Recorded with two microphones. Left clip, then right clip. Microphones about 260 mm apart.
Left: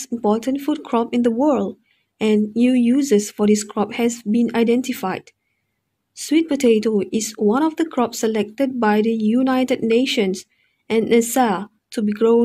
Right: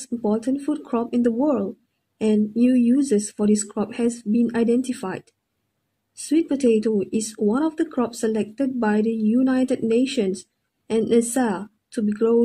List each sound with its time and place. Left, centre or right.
0.0 s speech: left